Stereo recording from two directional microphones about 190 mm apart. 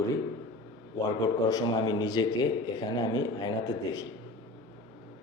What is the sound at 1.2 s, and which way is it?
Speech, 20° left (ahead or behind).